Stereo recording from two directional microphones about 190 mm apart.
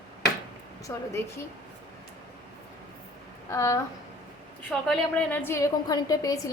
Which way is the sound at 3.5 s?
15° left (ahead or behind).